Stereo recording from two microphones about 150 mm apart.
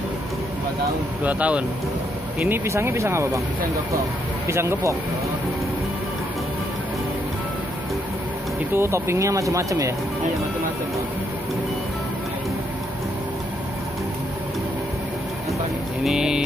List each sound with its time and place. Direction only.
1.2 s speech: 10° right (ahead or behind)
4.5 s speech: 20° right (ahead or behind)
8.7 s speech: 15° right (ahead or behind)
16.0 s speech: 5° right (ahead or behind)